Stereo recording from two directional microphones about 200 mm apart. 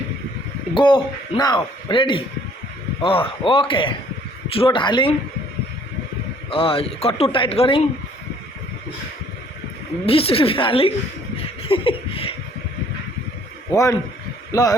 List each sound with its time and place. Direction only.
0.7 s speech: 25° left (ahead or behind)
6.5 s speech: 25° left (ahead or behind)
10.1 s speech: 30° left (ahead or behind)
11.6 s laughter: 25° left (ahead or behind)
13.7 s speech: 15° left (ahead or behind)